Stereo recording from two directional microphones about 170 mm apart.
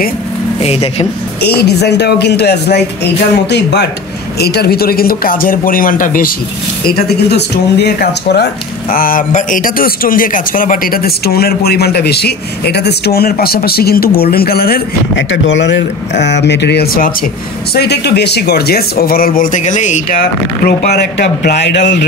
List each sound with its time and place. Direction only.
0.6 s speech: 35° left (ahead or behind)
1.6 s speech: 80° left
3.4 s speech: 90° left
4.4 s a man's voice: 70° left (ahead or behind); by 6.3 s 55° left (ahead or behind)
6.9 s speech: 75° left (ahead or behind)
8.9 s a man's voice: 55° left (ahead or behind)
17.7 s a man's voice: 75° left (ahead or behind)